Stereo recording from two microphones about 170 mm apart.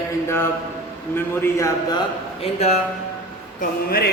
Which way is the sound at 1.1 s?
15° left (ahead or behind).